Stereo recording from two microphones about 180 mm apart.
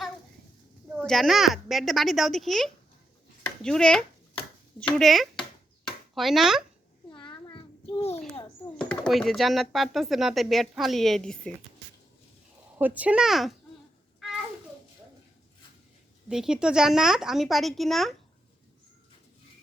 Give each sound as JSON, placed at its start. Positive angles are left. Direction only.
{"t": 1.0, "sound": "speech", "side_deg": 0}
{"t": 7.1, "sound": "a sound", "side_deg": 25}
{"t": 8.8, "sound": "speech", "side_deg": 5}
{"t": 12.8, "sound": "speech", "side_deg": -10}
{"t": 16.3, "sound": "speech", "side_deg": -5}